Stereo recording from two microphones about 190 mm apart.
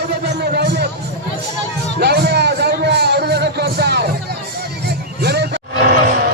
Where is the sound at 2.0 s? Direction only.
60° right (ahead or behind).